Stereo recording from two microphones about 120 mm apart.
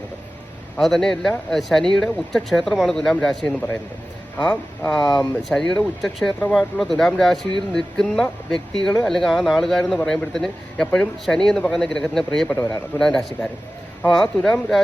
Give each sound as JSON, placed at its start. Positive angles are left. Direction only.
{"t": 0.8, "sound": "speech", "side_deg": 5}
{"t": 4.9, "sound": "speech", "side_deg": 5}